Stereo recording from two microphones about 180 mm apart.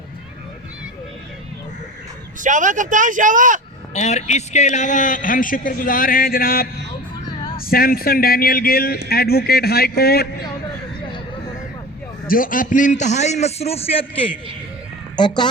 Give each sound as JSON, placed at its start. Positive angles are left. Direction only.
{"t": 2.4, "sound": "a man's voice", "side_deg": -45}
{"t": 3.9, "sound": "a man's voice", "side_deg": 40}
{"t": 12.3, "sound": "a man's voice", "side_deg": 50}